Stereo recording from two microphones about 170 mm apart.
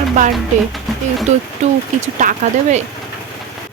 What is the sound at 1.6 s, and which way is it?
Speech, 45° right (ahead or behind).